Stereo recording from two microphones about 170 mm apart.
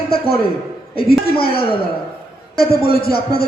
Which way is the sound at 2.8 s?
65° left (ahead or behind).